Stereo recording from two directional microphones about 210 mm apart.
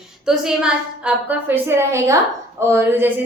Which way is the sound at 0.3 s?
5° right (ahead or behind).